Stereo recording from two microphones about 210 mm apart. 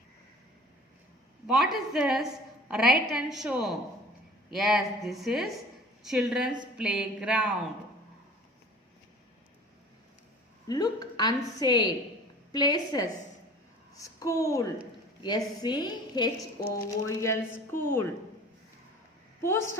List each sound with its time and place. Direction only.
1.5 s a woman's voice: centre (ahead or behind)
10.7 s a woman's voice: 20° left (ahead or behind)